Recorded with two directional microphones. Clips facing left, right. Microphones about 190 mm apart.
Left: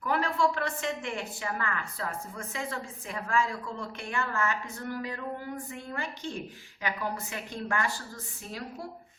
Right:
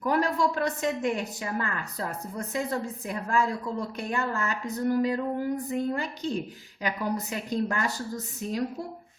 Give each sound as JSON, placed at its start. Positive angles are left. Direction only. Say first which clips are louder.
{"t": 0.0, "sound": "a woman's voice", "louder": "right 3 dB", "side_deg": -40}